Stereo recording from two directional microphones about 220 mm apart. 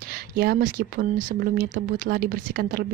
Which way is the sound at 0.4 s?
40° right (ahead or behind).